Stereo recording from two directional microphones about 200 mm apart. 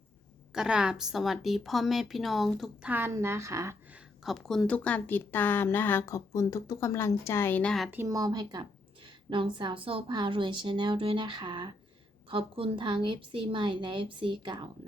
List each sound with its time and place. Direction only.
0.5 s speech: 5° right (ahead or behind)
4.2 s speech: centre (ahead or behind)
7.9 s a woman's voice: 15° right (ahead or behind)